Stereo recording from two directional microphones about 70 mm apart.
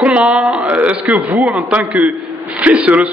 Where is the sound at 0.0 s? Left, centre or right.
Centre.